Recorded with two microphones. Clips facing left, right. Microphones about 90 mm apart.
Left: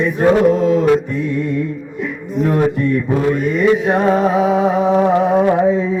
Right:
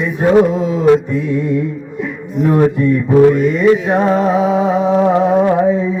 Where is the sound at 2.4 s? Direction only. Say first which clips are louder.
Right 3 dB; 20° right (ahead or behind).